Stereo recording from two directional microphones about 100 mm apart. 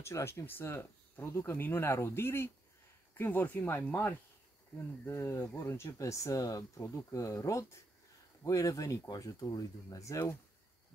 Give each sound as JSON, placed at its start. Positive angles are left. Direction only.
{"t": 0.0, "sound": "speech", "side_deg": 30}